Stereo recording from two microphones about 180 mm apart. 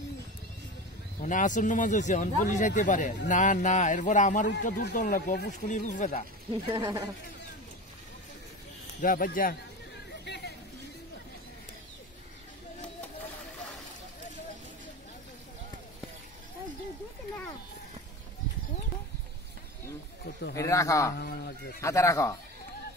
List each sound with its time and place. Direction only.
1.2 s speech: 45° left (ahead or behind)
5.7 s speech: 45° left (ahead or behind)
6.7 s a man's voice: 20° right (ahead or behind)
9.0 s speech: 50° left (ahead or behind)
10.2 s a sound: 70° left (ahead or behind)
20.5 s speech: 15° left (ahead or behind)
21.2 s speech: 60° left (ahead or behind)
21.8 s speech: 15° left (ahead or behind)